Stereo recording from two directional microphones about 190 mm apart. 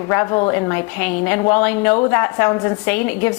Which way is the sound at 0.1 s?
20° left (ahead or behind).